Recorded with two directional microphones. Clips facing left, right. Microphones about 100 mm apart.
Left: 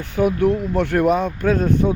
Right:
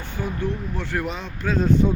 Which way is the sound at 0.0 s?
70° left (ahead or behind).